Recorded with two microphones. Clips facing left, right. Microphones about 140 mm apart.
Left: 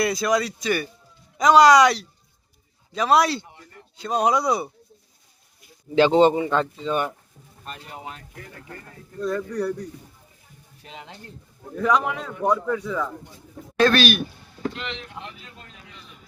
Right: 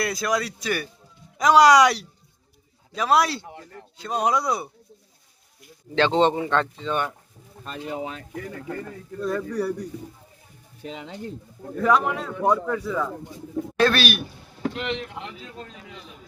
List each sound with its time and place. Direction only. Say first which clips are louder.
0.0 s a man's voice: left 3 dB; centre (ahead or behind)
5.9 s a man's voice: left 4 dB; 10° left (ahead or behind)
9.2 s speech: even; 10° right (ahead or behind)
11.8 s a man's voice: right 1 dB; centre (ahead or behind)
14.8 s speech: right 5 dB; 55° right (ahead or behind)